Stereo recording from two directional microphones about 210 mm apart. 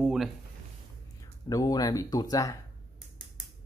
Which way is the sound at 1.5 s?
20° left (ahead or behind).